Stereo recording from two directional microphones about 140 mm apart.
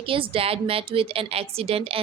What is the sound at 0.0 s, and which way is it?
Speech, 40° right (ahead or behind).